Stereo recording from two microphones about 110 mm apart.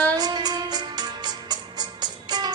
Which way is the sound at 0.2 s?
40° right (ahead or behind).